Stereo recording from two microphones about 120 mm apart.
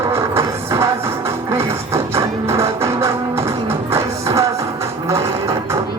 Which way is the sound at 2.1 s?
20° right (ahead or behind).